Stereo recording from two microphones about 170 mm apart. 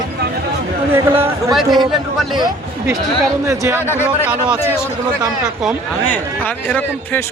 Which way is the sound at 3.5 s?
15° right (ahead or behind).